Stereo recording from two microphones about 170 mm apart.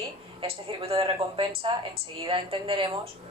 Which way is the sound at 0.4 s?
35° right (ahead or behind).